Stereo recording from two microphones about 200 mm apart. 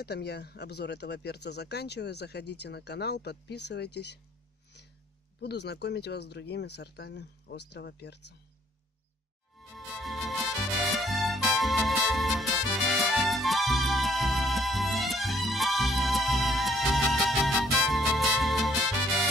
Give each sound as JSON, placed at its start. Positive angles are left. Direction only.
{"t": 0.0, "sound": "speech", "side_deg": 55}
{"t": 5.4, "sound": "speech", "side_deg": 55}
{"t": 9.6, "sound": "music", "side_deg": 0}